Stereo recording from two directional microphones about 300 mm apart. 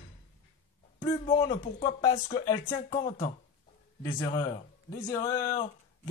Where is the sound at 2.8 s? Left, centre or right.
Left.